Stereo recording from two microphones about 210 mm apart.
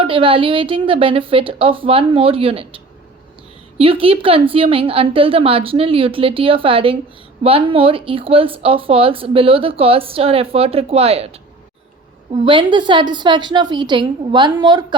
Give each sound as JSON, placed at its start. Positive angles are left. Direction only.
{"t": 0.0, "sound": "speech", "side_deg": -25}
{"t": 12.3, "sound": "speech", "side_deg": -25}